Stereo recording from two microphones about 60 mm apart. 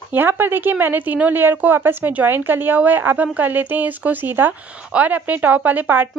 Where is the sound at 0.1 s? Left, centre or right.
Right.